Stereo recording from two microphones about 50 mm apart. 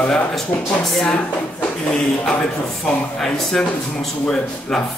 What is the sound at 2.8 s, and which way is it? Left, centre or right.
Speech, centre.